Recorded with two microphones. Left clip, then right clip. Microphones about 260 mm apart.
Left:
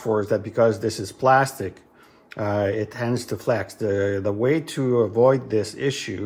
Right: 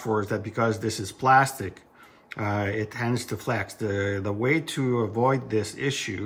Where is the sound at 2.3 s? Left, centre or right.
Right.